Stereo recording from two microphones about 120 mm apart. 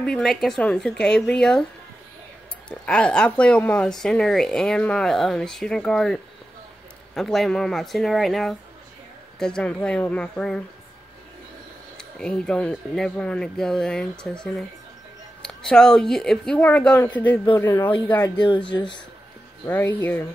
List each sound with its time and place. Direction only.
0.0 s speech: 5° left (ahead or behind)
2.9 s speech: 10° left (ahead or behind)
12.0 s speech: 5° left (ahead or behind)
18.7 s speech: 40° left (ahead or behind)
19.6 s speech: 15° left (ahead or behind)